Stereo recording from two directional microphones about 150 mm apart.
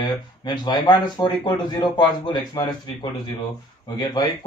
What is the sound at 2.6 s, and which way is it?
Speech, 25° left (ahead or behind).